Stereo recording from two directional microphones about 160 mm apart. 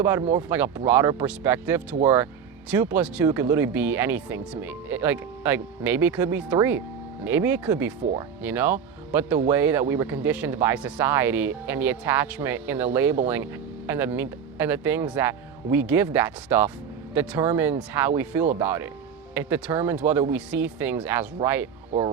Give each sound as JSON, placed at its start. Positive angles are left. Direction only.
{"t": 0.0, "sound": "speech", "side_deg": -15}